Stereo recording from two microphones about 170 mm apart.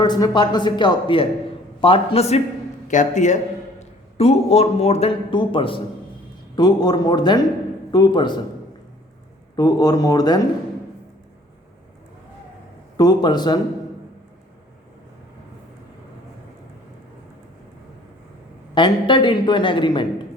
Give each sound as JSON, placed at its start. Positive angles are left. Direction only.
{"t": 0.0, "sound": "a man's voice", "side_deg": 25}
{"t": 9.6, "sound": "a man's voice", "side_deg": 20}
{"t": 13.0, "sound": "a man's voice", "side_deg": 25}
{"t": 18.7, "sound": "a man's voice", "side_deg": 30}